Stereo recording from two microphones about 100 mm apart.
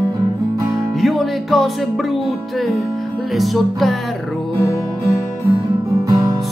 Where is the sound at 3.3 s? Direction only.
Centre (ahead or behind).